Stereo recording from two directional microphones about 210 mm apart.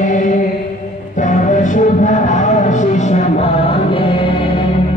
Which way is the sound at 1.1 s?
35° left (ahead or behind).